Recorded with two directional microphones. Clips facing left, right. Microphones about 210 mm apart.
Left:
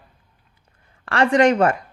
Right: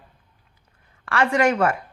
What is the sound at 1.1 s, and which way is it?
Speech, 35° left (ahead or behind).